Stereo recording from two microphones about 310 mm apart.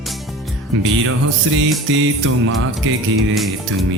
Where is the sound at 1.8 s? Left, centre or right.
Right.